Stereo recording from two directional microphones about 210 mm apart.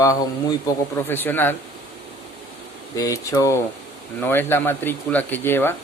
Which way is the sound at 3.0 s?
15° left (ahead or behind).